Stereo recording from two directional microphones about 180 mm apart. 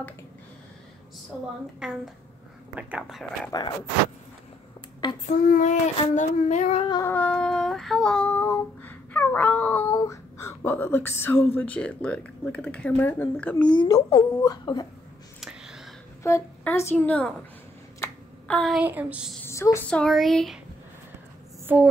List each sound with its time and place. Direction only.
1.8 s speech: 5° right (ahead or behind)
3.5 s speech: 25° left (ahead or behind)
5.5 s child singing: 45° left (ahead or behind)
5.9 s speech: 40° left (ahead or behind)
6.9 s child singing: 15° left (ahead or behind)
9.9 s speech: 15° left (ahead or behind)
13.7 s speech: 20° left (ahead or behind)
15.4 s a sound: centre (ahead or behind)
16.2 s a woman's voice: 15° left (ahead or behind)
18.0 s a sound: 5° left (ahead or behind)
18.8 s a sound: 10° right (ahead or behind)
19.4 s speech: 15° left (ahead or behind)